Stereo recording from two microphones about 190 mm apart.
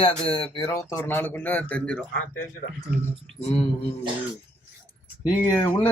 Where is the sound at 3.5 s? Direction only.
30° left (ahead or behind).